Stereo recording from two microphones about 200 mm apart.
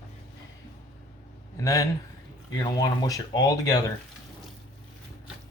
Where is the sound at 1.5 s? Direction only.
15° left (ahead or behind).